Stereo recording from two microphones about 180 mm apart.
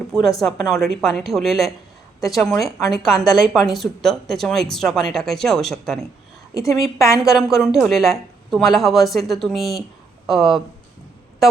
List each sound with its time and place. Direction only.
0.1 s a woman's voice: centre (ahead or behind)
6.5 s a woman's voice: 20° left (ahead or behind)
7.2 s a woman's voice: centre (ahead or behind)